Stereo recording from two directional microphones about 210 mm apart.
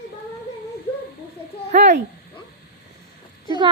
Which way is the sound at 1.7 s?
35° right (ahead or behind).